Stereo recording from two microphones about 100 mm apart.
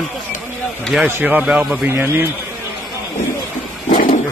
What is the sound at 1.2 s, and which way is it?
Speech, 15° right (ahead or behind).